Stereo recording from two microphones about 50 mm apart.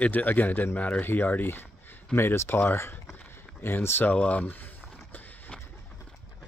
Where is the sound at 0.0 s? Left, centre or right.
Left.